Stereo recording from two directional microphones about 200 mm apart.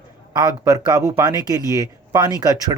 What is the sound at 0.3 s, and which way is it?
Speech, 20° right (ahead or behind).